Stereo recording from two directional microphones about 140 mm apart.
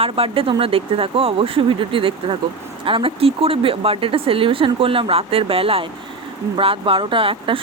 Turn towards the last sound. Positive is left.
turn(degrees=-40)  # may be behind; listen again after turning